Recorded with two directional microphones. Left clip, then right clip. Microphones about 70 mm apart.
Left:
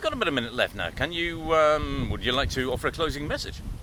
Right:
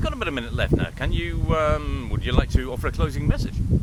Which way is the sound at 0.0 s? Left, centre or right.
Centre.